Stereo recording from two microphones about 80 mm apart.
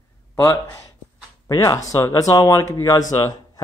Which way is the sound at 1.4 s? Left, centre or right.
Left.